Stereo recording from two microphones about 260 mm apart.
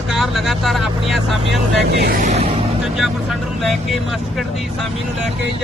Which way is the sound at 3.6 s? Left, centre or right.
Centre.